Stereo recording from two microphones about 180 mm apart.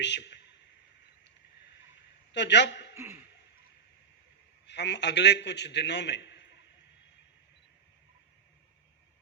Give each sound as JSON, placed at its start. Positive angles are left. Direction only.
{"t": 0.0, "sound": "speech", "side_deg": 75}
{"t": 2.3, "sound": "a man's voice", "side_deg": 75}
{"t": 2.9, "sound": "a sound", "side_deg": -15}
{"t": 4.6, "sound": "a man's voice", "side_deg": 75}